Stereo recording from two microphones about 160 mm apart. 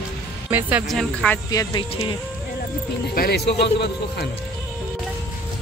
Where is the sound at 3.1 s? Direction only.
70° left (ahead or behind).